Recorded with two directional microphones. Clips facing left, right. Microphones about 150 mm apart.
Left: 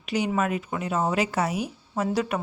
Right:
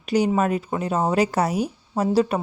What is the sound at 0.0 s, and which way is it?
A woman's voice, 40° right (ahead or behind).